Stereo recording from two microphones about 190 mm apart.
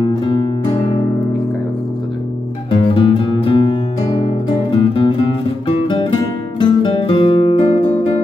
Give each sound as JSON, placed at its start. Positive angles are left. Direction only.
{"t": 0.0, "sound": "music", "side_deg": 20}
{"t": 2.7, "sound": "music", "side_deg": 25}
{"t": 6.6, "sound": "music", "side_deg": 25}